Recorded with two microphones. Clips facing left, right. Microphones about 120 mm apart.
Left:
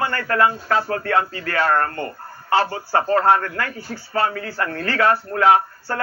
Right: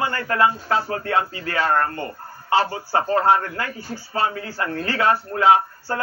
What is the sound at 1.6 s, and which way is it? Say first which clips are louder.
Speech: left 1 dB; 40° left (ahead or behind).